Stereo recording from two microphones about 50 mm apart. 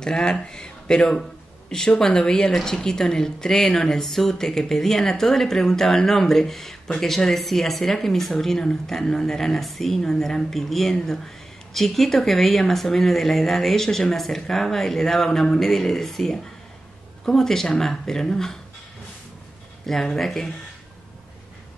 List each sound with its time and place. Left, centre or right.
0.0 s speech: centre
19.9 s speech: centre